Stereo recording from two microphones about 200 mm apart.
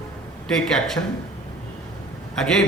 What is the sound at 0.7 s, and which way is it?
Speech, centre (ahead or behind).